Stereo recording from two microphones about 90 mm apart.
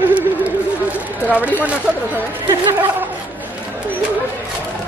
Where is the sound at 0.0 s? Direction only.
15° right (ahead or behind).